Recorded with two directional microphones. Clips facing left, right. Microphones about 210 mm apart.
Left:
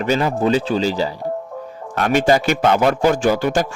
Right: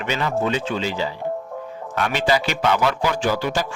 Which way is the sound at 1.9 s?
50° left (ahead or behind).